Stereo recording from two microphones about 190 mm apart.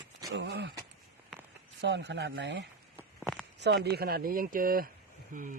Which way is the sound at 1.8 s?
70° right (ahead or behind).